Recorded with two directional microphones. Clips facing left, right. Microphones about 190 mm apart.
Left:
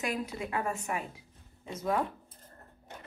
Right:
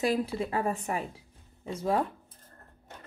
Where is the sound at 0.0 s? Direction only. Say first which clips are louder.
Right 6 dB; 30° right (ahead or behind).